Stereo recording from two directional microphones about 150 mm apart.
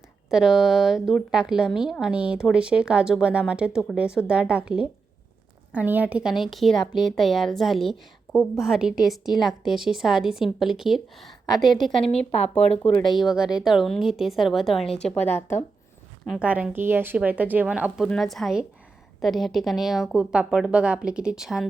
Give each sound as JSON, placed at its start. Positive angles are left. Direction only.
{"t": 0.3, "sound": "a woman's voice", "side_deg": -5}
{"t": 12.1, "sound": "speech", "side_deg": 45}
{"t": 13.1, "sound": "a woman's voice", "side_deg": 0}
{"t": 16.2, "sound": "a woman's voice", "side_deg": -5}